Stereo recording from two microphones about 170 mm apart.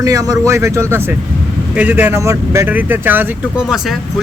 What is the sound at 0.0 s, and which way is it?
Speech, 20° right (ahead or behind).